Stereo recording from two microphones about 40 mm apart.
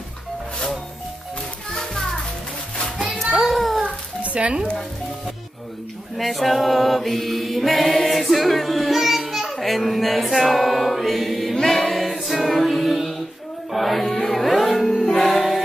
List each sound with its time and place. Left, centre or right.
1.8 s music: centre
3.2 s a sound: centre
3.8 s a sound: right
6.1 s mantra: centre
11.5 s choir: centre
13.7 s music: centre